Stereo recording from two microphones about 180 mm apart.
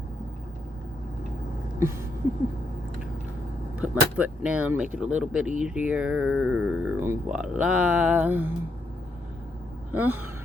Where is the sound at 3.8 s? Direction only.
5° right (ahead or behind).